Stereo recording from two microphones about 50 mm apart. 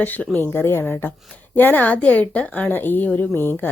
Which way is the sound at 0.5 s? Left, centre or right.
Left.